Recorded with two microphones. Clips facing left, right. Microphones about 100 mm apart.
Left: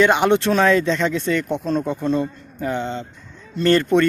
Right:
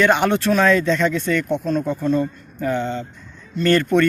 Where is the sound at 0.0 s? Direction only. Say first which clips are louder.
Left 1 dB; 20° left (ahead or behind).